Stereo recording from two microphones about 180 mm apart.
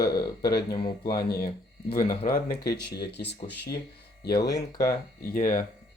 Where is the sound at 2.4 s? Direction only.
60° left (ahead or behind).